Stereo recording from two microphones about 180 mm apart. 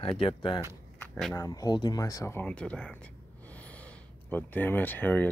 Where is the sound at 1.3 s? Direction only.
20° left (ahead or behind).